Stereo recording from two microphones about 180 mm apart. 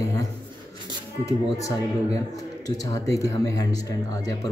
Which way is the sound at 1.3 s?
20° left (ahead or behind).